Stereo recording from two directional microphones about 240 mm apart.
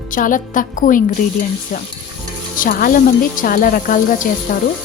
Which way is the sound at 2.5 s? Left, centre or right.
Left.